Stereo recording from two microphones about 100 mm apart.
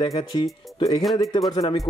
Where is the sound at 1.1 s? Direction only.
45° left (ahead or behind).